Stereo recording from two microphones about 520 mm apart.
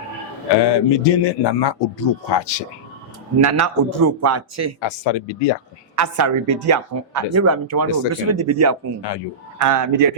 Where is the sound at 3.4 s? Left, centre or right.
Right.